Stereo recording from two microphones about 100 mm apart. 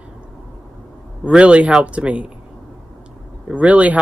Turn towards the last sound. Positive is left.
turn(degrees=-15)  # may be behind; listen again after turning